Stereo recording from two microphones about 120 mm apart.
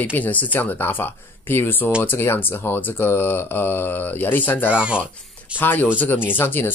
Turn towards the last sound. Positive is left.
turn(degrees=20)  # may be behind; listen again after turning